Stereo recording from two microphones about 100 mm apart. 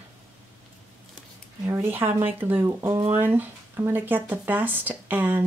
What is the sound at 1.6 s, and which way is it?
Speech, 25° right (ahead or behind).